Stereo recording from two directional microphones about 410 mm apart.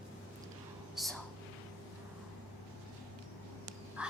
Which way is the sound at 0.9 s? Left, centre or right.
Centre.